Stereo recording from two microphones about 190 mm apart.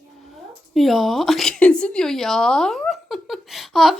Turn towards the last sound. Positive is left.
turn(degrees=0)  # may be behind; listen again after turning